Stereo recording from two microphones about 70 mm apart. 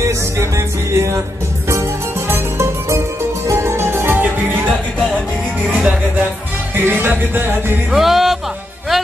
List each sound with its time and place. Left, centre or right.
0.0 s music: right
7.9 s music: centre